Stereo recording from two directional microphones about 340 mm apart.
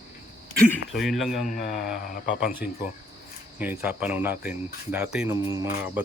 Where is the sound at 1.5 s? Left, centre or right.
Left.